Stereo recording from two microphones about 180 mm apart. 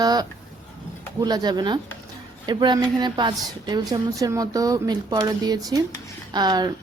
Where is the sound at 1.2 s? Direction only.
20° right (ahead or behind).